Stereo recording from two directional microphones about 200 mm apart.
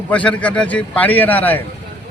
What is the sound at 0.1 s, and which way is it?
A man's voice, 5° left (ahead or behind).